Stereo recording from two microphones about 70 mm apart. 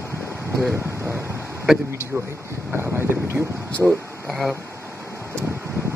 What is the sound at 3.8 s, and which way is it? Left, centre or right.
Speech, centre.